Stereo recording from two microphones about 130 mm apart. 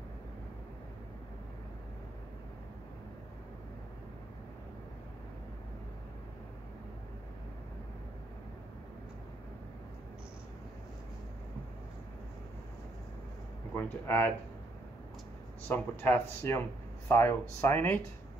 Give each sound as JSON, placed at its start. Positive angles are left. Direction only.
{"t": 13.7, "sound": "speech", "side_deg": 15}
{"t": 15.7, "sound": "speech", "side_deg": 15}